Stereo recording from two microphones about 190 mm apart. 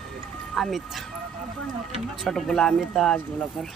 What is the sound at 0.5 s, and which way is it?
Speech, centre (ahead or behind).